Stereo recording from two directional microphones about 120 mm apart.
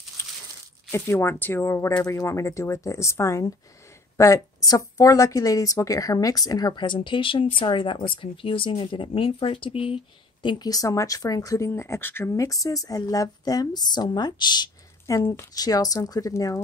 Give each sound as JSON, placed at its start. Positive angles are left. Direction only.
{"t": 0.9, "sound": "speech", "side_deg": 20}
{"t": 10.4, "sound": "speech", "side_deg": 35}